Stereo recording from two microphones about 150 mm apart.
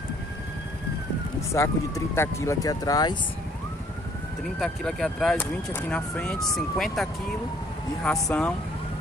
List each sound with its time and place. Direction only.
1.5 s speech: 20° left (ahead or behind)
4.6 s speech: 5° left (ahead or behind)